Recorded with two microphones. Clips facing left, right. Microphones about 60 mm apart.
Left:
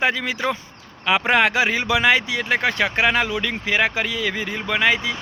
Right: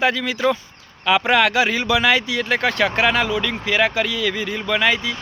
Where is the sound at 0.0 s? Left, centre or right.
Left.